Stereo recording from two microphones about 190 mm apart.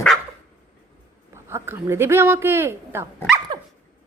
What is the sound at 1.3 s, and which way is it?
Speech, 15° right (ahead or behind).